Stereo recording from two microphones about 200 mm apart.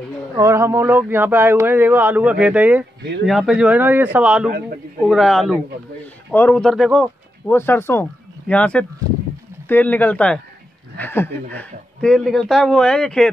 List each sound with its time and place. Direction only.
0.4 s speech: 15° right (ahead or behind)
4.5 s a man's voice: 45° right (ahead or behind)
5.0 s speech: centre (ahead or behind)
7.5 s speech: 10° left (ahead or behind)